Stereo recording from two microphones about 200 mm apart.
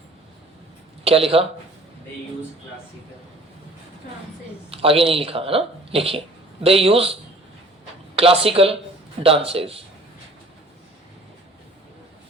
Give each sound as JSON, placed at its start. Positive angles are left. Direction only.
{"t": 1.0, "sound": "speech", "side_deg": -30}
{"t": 4.7, "sound": "speech", "side_deg": -30}